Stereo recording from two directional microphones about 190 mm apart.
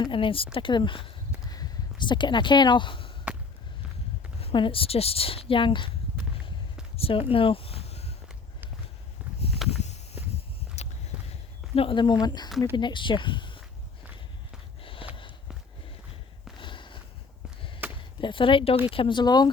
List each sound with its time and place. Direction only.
0.0 s speech: 25° left (ahead or behind)
4.4 s speech: 30° left (ahead or behind)
6.9 s speech: 30° left (ahead or behind)
9.6 s walk: 35° left (ahead or behind)
10.8 s a sound: 35° left (ahead or behind)
11.7 s speech: 30° left (ahead or behind)
14.8 s a sound: 30° left (ahead or behind)
16.6 s a sound: 25° left (ahead or behind)
17.8 s chop: 10° right (ahead or behind)
18.2 s speech: 25° left (ahead or behind)